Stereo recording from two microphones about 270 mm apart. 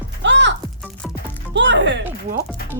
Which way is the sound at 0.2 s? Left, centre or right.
Right.